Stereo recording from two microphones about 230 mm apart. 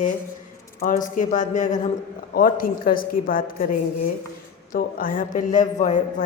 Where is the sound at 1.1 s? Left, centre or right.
Left.